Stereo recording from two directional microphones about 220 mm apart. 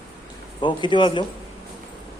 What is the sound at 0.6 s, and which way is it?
Speech, 20° left (ahead or behind).